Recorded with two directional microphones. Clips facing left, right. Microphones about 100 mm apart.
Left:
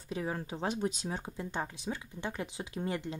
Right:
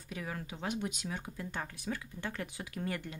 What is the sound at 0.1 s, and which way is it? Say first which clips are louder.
Speech: left 5 dB; 30° left (ahead or behind).